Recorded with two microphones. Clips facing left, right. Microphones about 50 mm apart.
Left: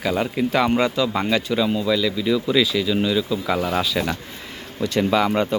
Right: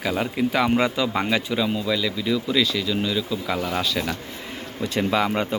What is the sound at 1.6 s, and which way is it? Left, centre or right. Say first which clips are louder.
Speech: left 3 dB; centre.